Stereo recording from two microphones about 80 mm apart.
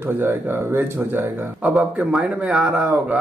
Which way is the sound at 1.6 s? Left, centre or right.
Centre.